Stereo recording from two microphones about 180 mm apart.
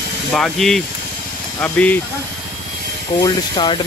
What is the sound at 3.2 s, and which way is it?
Speech, 25° left (ahead or behind).